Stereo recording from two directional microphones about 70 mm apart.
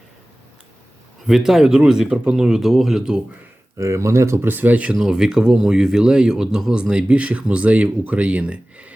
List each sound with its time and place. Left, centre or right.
1.3 s speech: centre
3.8 s speech: right
4.4 s speech: right
4.9 s speech: centre